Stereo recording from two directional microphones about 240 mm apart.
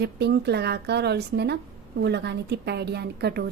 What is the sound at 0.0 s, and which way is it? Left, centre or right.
A woman's voice, right.